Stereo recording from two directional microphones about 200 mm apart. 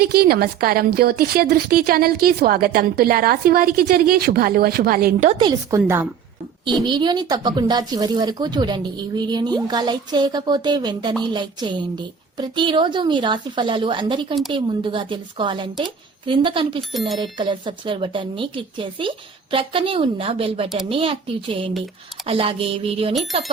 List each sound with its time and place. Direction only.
0.0 s a woman's voice: 50° right (ahead or behind)
5.3 s speech: 25° right (ahead or behind)